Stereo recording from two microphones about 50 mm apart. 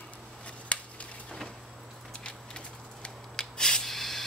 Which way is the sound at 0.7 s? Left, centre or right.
Left.